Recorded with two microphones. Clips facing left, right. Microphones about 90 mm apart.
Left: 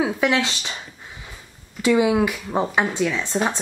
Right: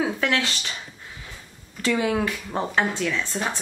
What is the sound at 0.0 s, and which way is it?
Speech, 15° left (ahead or behind).